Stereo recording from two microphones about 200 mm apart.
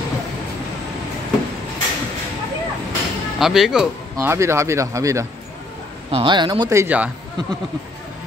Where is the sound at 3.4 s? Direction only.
Centre (ahead or behind).